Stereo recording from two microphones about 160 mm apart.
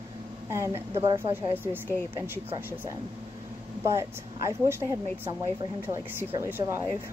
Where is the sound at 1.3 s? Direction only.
10° right (ahead or behind).